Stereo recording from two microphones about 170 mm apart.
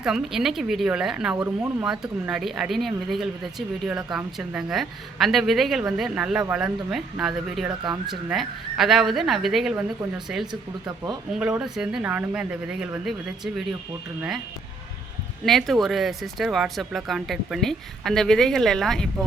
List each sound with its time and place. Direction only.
0.0 s speech: 5° right (ahead or behind)
10.4 s speech: 25° right (ahead or behind)
11.3 s speech: 5° right (ahead or behind)
15.4 s speech: centre (ahead or behind)